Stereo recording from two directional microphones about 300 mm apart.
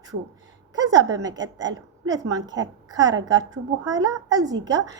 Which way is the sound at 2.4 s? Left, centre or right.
Right.